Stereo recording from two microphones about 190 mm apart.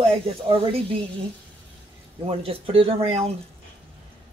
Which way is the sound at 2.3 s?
30° right (ahead or behind).